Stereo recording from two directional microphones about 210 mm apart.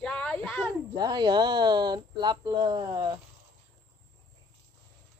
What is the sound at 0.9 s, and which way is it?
Speech, 20° right (ahead or behind).